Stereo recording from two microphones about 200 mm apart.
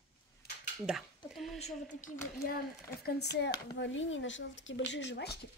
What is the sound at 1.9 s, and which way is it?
Speech, 40° left (ahead or behind).